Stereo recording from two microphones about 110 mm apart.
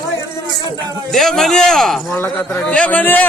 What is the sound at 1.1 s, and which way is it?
Speech, centre (ahead or behind).